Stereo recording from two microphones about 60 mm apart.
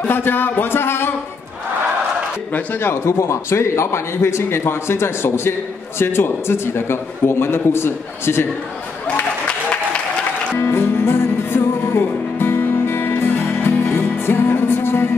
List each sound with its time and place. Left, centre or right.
0.0 s speech: left
2.8 s a man's voice: left
10.6 s music: left